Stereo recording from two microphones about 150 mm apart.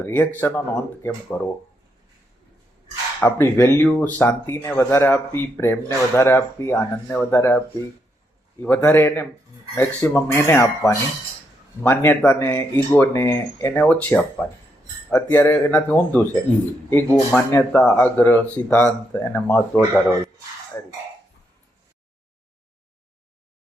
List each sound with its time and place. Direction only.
0.0 s speech: 10° left (ahead or behind)
3.2 s speech: 15° left (ahead or behind)
8.6 s speech: 10° left (ahead or behind)